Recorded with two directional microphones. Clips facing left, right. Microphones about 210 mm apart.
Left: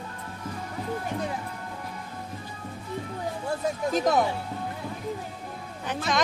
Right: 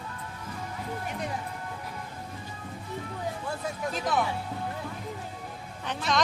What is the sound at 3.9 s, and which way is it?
Speech, 45° left (ahead or behind).